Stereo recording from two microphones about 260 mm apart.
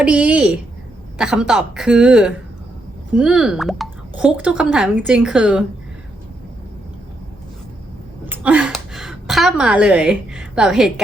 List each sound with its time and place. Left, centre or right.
0.0 s speech: centre
8.3 s a woman's voice: centre